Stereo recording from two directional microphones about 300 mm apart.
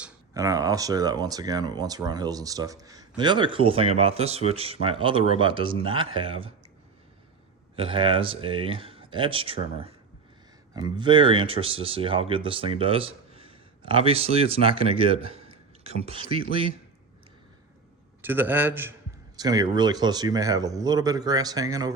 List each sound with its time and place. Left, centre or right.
0.0 s speech: centre
7.8 s speech: centre
18.2 s speech: centre